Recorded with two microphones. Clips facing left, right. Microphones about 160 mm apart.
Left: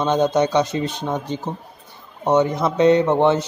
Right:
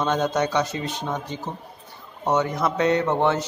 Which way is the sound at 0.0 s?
20° left (ahead or behind).